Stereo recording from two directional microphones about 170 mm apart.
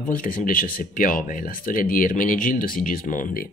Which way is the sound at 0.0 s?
55° left (ahead or behind).